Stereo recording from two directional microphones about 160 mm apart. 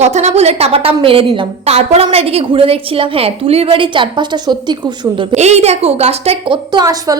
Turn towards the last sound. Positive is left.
turn(degrees=-25)  # may be behind; listen again after turning